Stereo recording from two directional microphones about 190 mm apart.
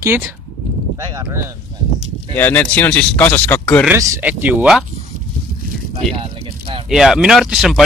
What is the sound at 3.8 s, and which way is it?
Speech, 15° right (ahead or behind).